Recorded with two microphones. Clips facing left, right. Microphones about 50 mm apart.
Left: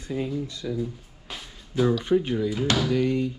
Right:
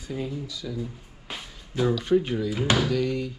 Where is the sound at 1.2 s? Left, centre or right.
Centre.